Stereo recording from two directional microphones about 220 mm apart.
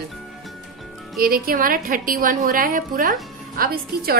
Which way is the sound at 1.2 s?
40° right (ahead or behind).